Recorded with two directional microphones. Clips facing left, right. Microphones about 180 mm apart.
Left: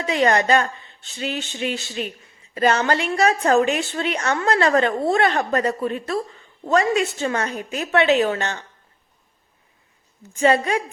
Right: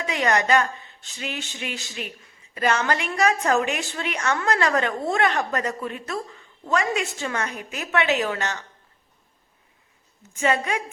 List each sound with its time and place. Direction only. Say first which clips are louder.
0.0 s a woman's voice: left 4 dB; 30° left (ahead or behind)
10.3 s a woman's voice: left 5 dB; 35° left (ahead or behind)